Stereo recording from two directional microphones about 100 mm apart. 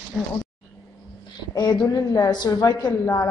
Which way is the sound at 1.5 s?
45° left (ahead or behind).